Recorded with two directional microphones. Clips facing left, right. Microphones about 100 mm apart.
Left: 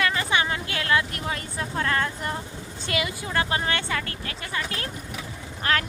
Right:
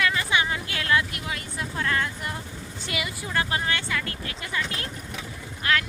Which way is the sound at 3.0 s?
25° left (ahead or behind).